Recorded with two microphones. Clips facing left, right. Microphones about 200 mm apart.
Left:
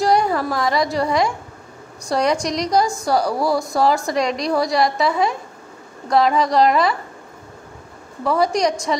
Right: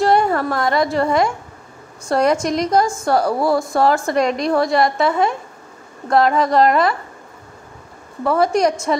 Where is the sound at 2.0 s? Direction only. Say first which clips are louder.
Right 3 dB; 5° right (ahead or behind).